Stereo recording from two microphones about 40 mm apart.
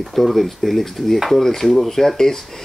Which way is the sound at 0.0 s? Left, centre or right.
Centre.